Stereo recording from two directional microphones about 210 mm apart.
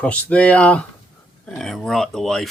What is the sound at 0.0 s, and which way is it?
Speech, 5° left (ahead or behind).